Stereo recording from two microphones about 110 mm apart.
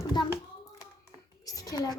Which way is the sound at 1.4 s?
35° left (ahead or behind).